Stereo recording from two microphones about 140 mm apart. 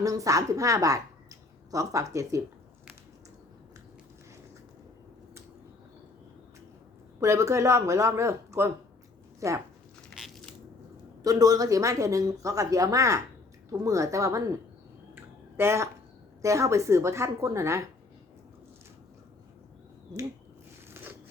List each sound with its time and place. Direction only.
0.0 s a woman's voice: 25° right (ahead or behind)
7.2 s speech: 20° right (ahead or behind)
10.2 s biting: centre (ahead or behind)
11.2 s speech: 25° right (ahead or behind)
15.1 s a sound: 20° right (ahead or behind)
16.4 s speech: 20° right (ahead or behind)
20.9 s zipper: 15° right (ahead or behind)